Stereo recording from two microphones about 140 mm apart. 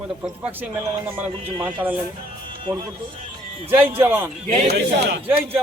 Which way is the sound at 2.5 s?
35° right (ahead or behind).